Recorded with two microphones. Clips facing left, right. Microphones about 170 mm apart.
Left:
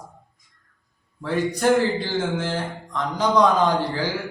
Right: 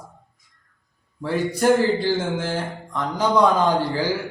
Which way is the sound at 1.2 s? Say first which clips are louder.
Right 1 dB; 10° right (ahead or behind).